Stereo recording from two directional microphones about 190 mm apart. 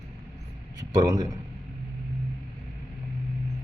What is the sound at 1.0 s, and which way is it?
Speech, 20° right (ahead or behind).